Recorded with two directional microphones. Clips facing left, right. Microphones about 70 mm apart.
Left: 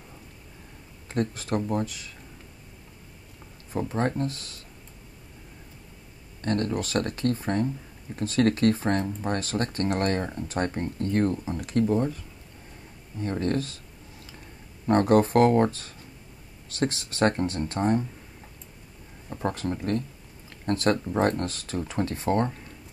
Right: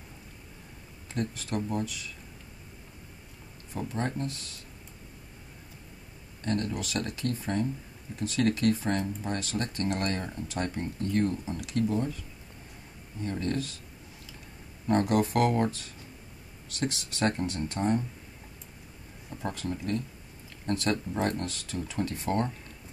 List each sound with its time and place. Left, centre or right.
1.1 s speech: left
3.7 s speech: left
6.4 s speech: left
13.2 s speech: left
14.9 s speech: left
19.3 s speech: left